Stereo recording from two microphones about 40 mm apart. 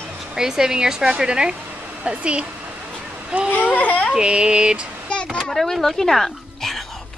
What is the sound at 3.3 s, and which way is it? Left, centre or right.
Speech, right.